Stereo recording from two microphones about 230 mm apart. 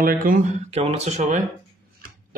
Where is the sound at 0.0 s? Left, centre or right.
Right.